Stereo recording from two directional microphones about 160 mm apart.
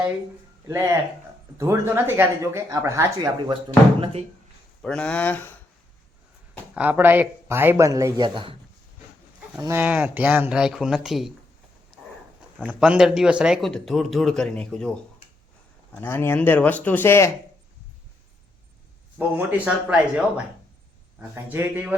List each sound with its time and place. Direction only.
0.7 s speech: 15° right (ahead or behind)
4.0 s speech: 40° right (ahead or behind)
4.8 s speech: 5° left (ahead or behind)
6.7 s speech: 10° right (ahead or behind); by 8.5 s 30° right (ahead or behind)
9.6 s speech: 15° right (ahead or behind)
12.5 s speech: 5° right (ahead or behind)
16.0 s speech: 15° left (ahead or behind)
19.4 s speech: 10° right (ahead or behind)